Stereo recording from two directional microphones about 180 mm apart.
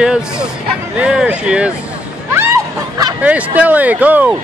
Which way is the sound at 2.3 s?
15° right (ahead or behind).